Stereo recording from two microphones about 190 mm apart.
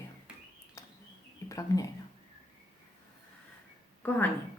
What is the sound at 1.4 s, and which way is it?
Speech, 20° left (ahead or behind).